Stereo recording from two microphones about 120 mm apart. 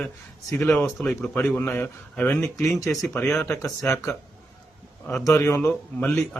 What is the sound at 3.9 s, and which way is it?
Speech, 25° left (ahead or behind).